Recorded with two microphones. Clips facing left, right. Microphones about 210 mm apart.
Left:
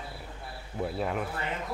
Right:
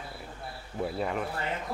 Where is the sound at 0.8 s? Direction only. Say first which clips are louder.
Even; centre (ahead or behind).